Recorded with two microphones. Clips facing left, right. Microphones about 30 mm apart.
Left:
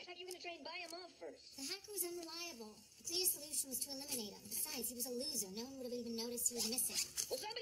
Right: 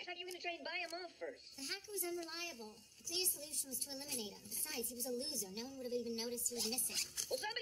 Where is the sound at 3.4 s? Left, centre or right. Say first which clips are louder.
Right 1 dB; centre.